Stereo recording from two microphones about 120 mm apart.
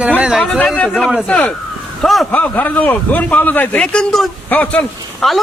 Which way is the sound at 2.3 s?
15° left (ahead or behind).